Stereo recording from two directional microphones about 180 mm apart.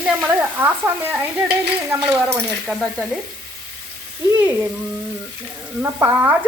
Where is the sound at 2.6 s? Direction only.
Centre (ahead or behind).